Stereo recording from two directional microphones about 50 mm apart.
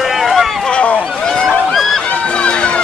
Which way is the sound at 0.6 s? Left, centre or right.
Left.